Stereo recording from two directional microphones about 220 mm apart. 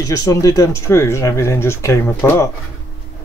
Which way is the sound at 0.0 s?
15° left (ahead or behind).